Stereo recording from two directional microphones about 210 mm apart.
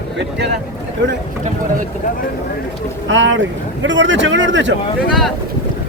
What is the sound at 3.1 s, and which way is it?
Speech, 65° right (ahead or behind).